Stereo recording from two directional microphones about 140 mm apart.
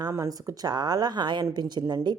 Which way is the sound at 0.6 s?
30° right (ahead or behind).